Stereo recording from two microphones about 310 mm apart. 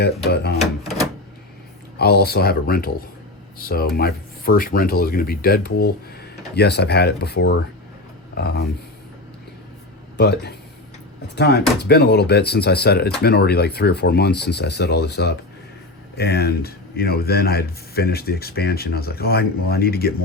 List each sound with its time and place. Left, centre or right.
0.0 s a man's voice: left
0.6 s a sound: centre
2.0 s a man's voice: left
10.2 s a man's voice: left